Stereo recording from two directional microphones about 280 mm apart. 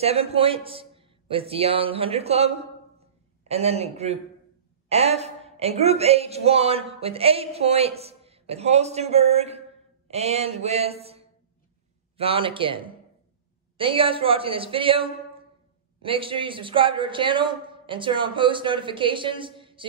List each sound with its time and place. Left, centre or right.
0.0 s a man's voice: right